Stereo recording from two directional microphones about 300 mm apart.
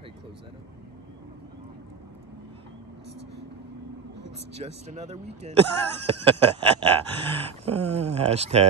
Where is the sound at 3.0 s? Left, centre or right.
Right.